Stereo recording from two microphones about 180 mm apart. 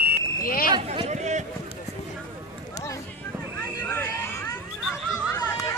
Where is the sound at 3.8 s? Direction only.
10° left (ahead or behind).